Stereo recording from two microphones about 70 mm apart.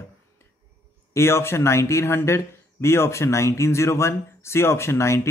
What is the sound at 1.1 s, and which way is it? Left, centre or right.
Speech, left.